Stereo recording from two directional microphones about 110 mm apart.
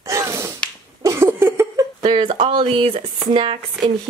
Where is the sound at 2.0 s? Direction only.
50° right (ahead or behind).